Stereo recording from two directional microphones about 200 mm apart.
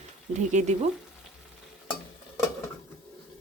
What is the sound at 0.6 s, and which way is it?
Speech, 35° right (ahead or behind).